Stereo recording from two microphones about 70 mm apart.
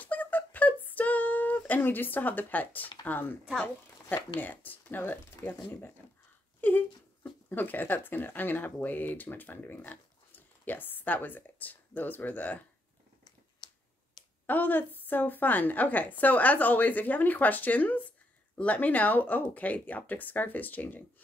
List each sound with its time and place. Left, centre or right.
0.0 s a sound: left
0.8 s female singing: left
1.7 s speech: left
14.4 s speech: left